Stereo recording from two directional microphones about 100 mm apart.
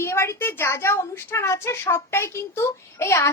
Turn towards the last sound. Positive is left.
turn(degrees=25)  # may be behind; listen again after turning